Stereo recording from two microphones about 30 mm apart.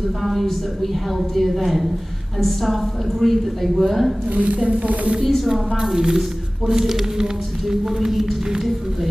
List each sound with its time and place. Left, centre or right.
0.2 s a woman's voice: centre
1.5 s a woman's voice: centre
4.3 s a woman's voice: right
4.6 s speech: right
5.2 s a woman's voice: centre
5.8 s a woman's voice: centre